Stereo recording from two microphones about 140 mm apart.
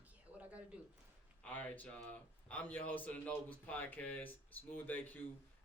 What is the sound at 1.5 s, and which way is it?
A man's voice, 10° left (ahead or behind).